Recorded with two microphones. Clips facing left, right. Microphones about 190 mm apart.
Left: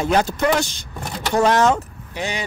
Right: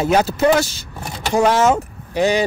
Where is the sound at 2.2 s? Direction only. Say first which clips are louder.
Right 10 dB; 35° right (ahead or behind).